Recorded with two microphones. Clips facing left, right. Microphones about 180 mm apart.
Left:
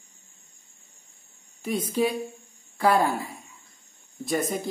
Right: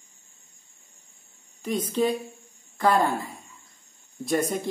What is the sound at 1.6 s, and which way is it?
Speech, 10° left (ahead or behind).